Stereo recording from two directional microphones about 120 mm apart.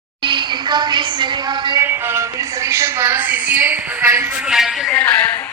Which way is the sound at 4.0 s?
20° right (ahead or behind).